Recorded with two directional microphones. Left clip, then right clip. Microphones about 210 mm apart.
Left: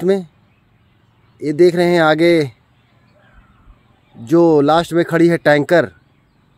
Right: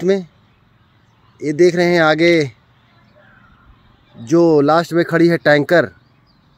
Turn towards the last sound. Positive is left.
turn(degrees=0)  # may be behind; listen again after turning